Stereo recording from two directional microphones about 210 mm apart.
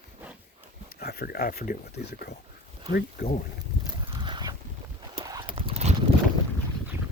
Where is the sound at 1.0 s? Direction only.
50° left (ahead or behind).